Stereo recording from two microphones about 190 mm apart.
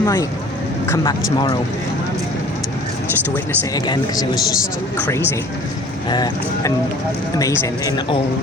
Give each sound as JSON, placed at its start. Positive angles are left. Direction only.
{"t": 0.0, "sound": "speech", "side_deg": 15}
{"t": 3.3, "sound": "speech", "side_deg": 20}
{"t": 6.1, "sound": "speech", "side_deg": 20}